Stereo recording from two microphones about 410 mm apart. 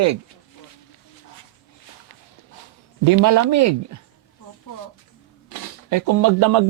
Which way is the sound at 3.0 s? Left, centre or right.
Right.